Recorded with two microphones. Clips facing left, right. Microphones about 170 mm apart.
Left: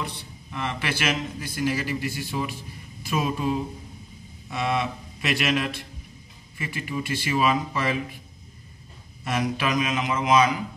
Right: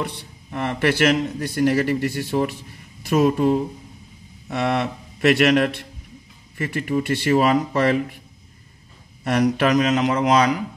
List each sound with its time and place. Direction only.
0.0 s a man's voice: 60° right (ahead or behind)
9.2 s a man's voice: 65° right (ahead or behind)